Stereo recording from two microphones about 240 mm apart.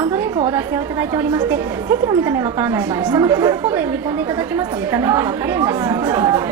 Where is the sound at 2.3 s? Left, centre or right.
Centre.